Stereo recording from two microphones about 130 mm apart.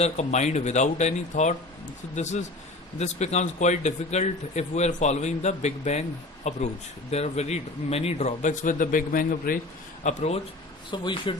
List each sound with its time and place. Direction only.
0.0 s a man's voice: 60° left (ahead or behind); by 9.6 s 90° left
10.0 s speech: 65° left (ahead or behind)
10.9 s speech: 40° left (ahead or behind)